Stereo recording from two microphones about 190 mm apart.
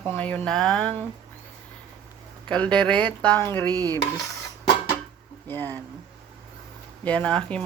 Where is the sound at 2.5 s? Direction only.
5° left (ahead or behind).